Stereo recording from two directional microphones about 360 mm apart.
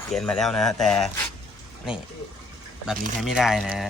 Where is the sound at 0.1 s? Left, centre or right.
Centre.